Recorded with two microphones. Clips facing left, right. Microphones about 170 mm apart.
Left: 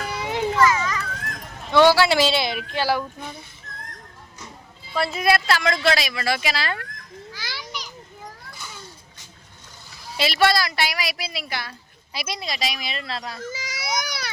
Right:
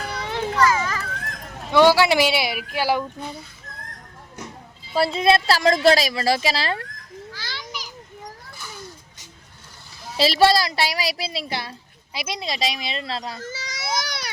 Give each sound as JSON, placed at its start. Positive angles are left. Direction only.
{"t": 0.2, "sound": "children playing", "side_deg": 15}
{"t": 0.7, "sound": "a sound", "side_deg": -30}
{"t": 1.7, "sound": "speech", "side_deg": -15}
{"t": 4.9, "sound": "a woman's voice", "side_deg": -30}
{"t": 7.3, "sound": "children playing", "side_deg": 15}
{"t": 7.6, "sound": "children playing", "side_deg": -5}
{"t": 10.2, "sound": "a woman's voice", "side_deg": -30}
{"t": 13.5, "sound": "a sound", "side_deg": 10}